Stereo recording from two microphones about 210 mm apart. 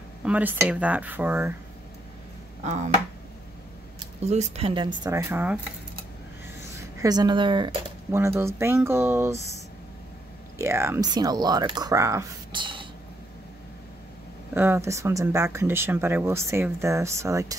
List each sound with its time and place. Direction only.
0.2 s speech: 5° right (ahead or behind)
2.6 s speech: 35° right (ahead or behind)
4.2 s speech: 30° right (ahead or behind); by 5.6 s 10° right (ahead or behind)
6.8 s speech: 15° right (ahead or behind)
10.6 s speech: 10° right (ahead or behind)
14.5 s speech: 10° right (ahead or behind)